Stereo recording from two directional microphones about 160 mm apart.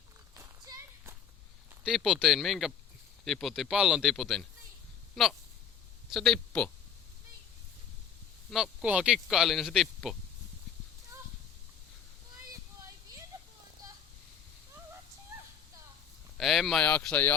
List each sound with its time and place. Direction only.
0.3 s walk: 20° right (ahead or behind)
1.8 s speech: 5° right (ahead or behind)
6.1 s a man's voice: centre (ahead or behind)
8.4 s speech: centre (ahead or behind)
16.4 s speech: centre (ahead or behind)